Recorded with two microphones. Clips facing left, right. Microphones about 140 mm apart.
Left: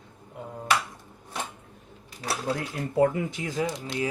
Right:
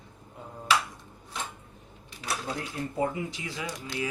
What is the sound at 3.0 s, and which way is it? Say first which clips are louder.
Speech: left 8 dB; 60° left (ahead or behind).